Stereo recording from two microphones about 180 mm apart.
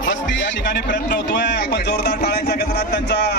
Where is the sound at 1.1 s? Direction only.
75° left (ahead or behind).